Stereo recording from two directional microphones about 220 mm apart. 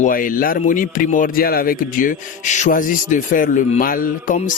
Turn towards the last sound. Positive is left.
turn(degrees=35)  # may be behind; listen again after turning